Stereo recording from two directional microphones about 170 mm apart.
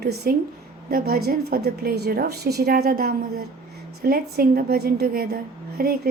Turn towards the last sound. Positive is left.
turn(degrees=-65)  # may be behind; listen again after turning